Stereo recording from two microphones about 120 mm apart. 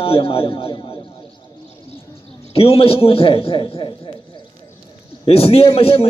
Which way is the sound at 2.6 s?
50° left (ahead or behind).